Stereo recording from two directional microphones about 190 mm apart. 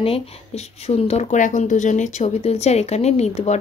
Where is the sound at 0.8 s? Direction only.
35° left (ahead or behind).